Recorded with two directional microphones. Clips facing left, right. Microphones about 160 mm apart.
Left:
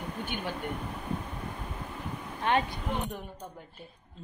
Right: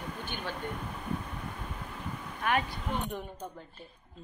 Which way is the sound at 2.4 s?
25° left (ahead or behind).